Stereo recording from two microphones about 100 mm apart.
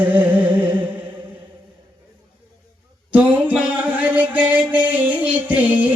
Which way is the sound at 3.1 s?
15° right (ahead or behind).